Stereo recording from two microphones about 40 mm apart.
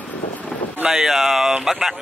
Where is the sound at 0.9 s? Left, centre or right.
Centre.